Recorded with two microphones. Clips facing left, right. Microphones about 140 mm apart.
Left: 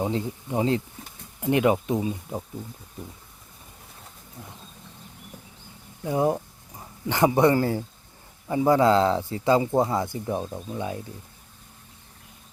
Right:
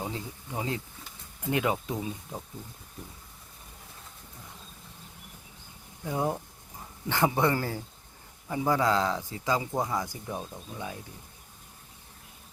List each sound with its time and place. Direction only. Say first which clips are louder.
0.0 s speech: left 9 dB; 25° left (ahead or behind)
6.1 s speech: left 6 dB; 20° left (ahead or behind)